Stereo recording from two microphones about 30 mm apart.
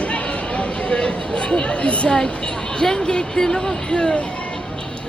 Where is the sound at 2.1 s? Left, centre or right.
Left.